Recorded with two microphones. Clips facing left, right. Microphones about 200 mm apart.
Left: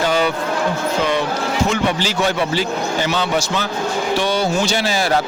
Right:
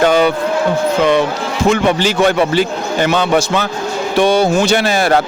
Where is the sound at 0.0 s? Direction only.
60° right (ahead or behind).